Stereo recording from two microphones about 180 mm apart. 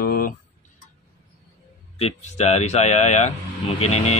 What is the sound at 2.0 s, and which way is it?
Speech, 35° left (ahead or behind).